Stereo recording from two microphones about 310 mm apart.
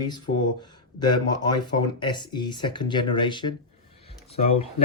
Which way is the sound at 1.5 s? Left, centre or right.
Centre.